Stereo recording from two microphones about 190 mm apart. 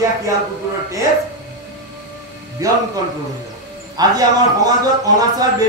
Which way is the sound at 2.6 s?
20° right (ahead or behind).